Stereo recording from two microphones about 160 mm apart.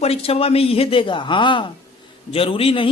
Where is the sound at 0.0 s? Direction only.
40° left (ahead or behind).